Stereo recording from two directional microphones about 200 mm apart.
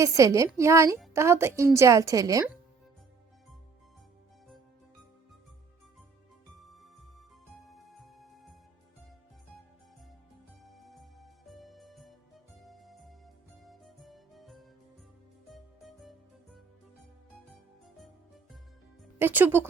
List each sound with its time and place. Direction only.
0.0 s a woman's voice: 15° right (ahead or behind)
7.9 s music: centre (ahead or behind)
10.8 s music: centre (ahead or behind)
19.2 s a woman's voice: 10° right (ahead or behind)